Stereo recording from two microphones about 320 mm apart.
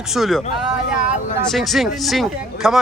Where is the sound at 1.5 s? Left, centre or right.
Centre.